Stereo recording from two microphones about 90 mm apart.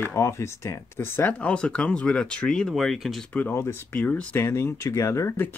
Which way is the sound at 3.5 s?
20° left (ahead or behind).